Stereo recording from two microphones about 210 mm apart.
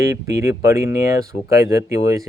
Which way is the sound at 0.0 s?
15° right (ahead or behind).